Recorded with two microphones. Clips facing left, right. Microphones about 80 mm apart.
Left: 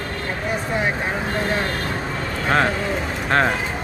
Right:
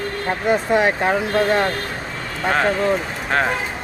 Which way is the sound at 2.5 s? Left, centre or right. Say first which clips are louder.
Right 3 dB; centre.